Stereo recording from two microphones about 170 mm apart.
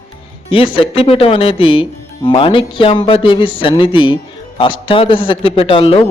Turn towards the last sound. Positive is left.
turn(degrees=30)  # may be behind; listen again after turning